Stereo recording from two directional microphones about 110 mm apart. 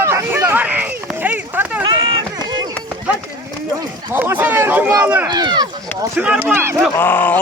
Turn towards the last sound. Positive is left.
turn(degrees=15)  # may be behind; listen again after turning